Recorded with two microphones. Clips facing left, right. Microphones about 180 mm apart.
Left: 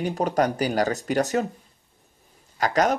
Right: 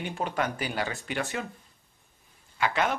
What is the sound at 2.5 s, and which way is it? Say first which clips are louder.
Speech: left 6 dB; 40° left (ahead or behind).